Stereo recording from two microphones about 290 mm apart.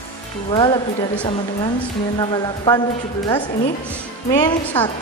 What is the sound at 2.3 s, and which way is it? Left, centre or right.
Speech, centre.